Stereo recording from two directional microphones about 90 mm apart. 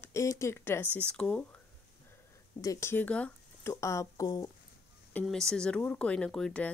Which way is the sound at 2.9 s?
15° left (ahead or behind).